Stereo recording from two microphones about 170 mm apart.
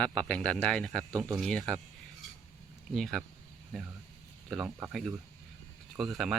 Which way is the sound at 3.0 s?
Centre (ahead or behind).